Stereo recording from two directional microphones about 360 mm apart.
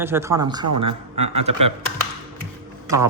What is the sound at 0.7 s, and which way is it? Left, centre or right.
Speech, right.